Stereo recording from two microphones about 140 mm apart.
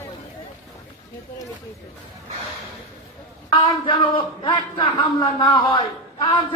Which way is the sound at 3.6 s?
35° left (ahead or behind).